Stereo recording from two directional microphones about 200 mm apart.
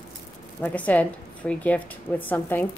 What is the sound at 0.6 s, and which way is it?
Speech, 10° left (ahead or behind).